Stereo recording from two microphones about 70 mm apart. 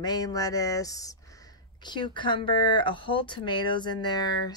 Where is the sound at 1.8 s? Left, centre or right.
Left.